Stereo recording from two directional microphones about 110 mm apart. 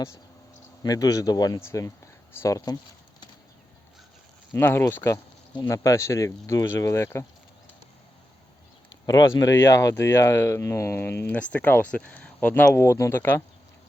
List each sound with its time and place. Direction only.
0.8 s speech: 35° left (ahead or behind)
4.5 s speech: 20° left (ahead or behind)
9.0 s speech: 35° left (ahead or behind)
11.3 s speech: 15° left (ahead or behind)